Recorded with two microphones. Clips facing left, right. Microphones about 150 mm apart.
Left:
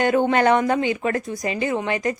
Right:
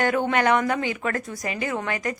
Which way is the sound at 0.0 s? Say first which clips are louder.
Left 4 dB; 25° left (ahead or behind).